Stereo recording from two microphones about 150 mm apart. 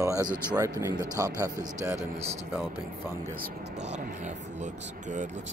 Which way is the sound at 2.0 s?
45° right (ahead or behind).